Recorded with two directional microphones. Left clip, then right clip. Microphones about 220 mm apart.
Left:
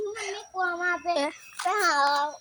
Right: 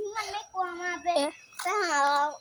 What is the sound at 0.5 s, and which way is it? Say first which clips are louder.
Speech: left 6 dB; 40° right (ahead or behind).